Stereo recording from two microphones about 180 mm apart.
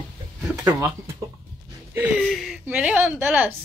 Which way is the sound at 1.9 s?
10° right (ahead or behind).